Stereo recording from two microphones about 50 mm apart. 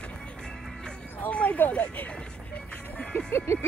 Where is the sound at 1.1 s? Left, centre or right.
Left.